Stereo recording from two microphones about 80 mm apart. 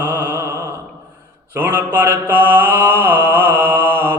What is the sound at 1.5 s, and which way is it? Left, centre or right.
Mantra, right.